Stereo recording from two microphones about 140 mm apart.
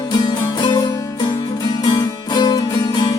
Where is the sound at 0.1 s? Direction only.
30° left (ahead or behind).